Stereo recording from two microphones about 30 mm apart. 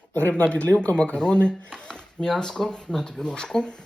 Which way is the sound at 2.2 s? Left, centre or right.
Left.